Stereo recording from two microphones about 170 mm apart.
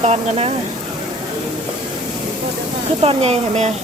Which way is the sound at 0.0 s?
40° right (ahead or behind).